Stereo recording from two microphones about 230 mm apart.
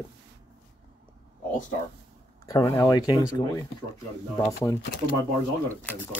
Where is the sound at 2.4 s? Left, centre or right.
Centre.